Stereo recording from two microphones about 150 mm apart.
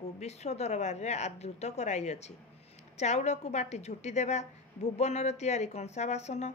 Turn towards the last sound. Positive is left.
turn(degrees=50)  # may be behind; listen again after turning